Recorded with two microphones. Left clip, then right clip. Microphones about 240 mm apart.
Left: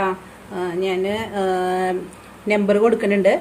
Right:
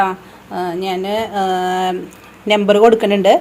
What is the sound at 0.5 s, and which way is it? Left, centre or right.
A woman's voice, right.